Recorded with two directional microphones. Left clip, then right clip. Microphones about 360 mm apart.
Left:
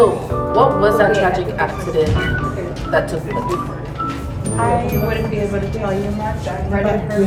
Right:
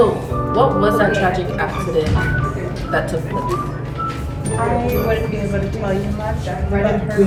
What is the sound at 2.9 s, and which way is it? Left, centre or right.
Speech, centre.